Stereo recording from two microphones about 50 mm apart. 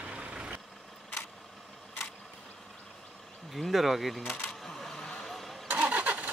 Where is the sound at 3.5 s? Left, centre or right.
Centre.